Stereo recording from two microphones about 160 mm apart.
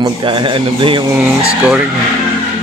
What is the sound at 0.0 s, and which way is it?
A man's voice, 30° right (ahead or behind).